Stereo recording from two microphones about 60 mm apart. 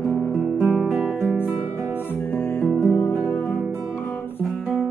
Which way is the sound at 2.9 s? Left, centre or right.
Left.